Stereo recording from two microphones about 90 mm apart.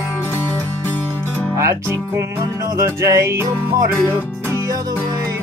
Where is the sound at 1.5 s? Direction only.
35° right (ahead or behind).